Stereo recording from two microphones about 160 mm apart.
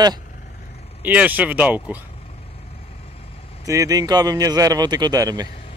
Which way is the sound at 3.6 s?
20° right (ahead or behind).